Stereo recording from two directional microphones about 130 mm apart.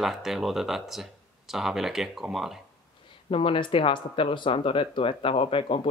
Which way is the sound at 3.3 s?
45° left (ahead or behind).